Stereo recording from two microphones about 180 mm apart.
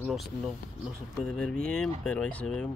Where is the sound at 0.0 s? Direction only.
Centre (ahead or behind).